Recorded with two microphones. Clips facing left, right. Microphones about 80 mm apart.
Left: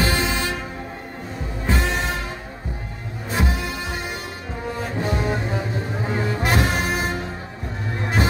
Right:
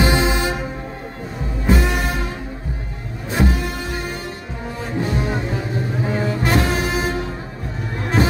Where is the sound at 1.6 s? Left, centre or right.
Centre.